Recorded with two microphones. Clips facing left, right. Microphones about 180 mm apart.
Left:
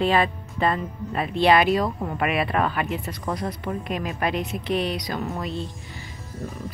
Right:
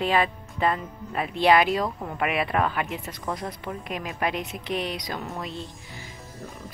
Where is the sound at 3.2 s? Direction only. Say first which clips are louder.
Left 3 dB; 5° left (ahead or behind).